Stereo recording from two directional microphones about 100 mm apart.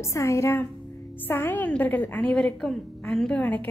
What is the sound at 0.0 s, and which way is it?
A woman's voice, 30° left (ahead or behind).